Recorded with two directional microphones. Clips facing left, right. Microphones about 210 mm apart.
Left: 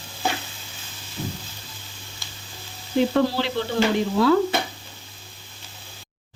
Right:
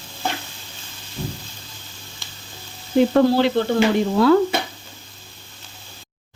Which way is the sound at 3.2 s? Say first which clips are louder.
Right 6 dB; 50° right (ahead or behind).